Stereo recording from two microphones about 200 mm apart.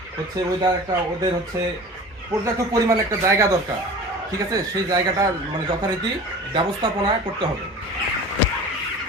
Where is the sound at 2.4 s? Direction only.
15° right (ahead or behind).